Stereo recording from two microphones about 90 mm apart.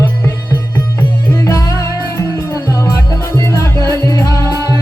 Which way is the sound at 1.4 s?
35° left (ahead or behind).